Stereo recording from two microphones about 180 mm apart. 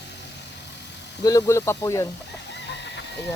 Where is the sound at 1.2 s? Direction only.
20° left (ahead or behind).